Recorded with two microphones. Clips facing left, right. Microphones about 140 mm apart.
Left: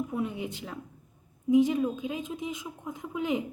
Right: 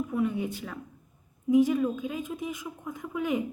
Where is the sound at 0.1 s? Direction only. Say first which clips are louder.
Right 4 dB; 20° left (ahead or behind).